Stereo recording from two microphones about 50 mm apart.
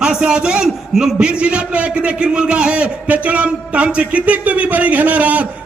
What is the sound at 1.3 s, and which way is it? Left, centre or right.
A man's voice, right.